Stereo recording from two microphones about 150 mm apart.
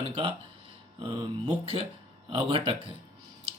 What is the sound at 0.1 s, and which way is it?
Speech, 35° right (ahead or behind).